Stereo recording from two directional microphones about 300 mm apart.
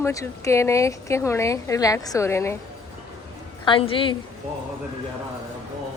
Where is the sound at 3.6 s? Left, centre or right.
Centre.